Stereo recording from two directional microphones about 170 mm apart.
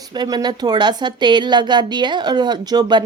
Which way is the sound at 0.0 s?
25° right (ahead or behind).